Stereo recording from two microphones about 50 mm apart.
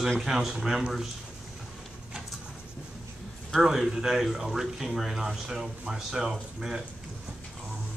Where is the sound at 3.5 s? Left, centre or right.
Centre.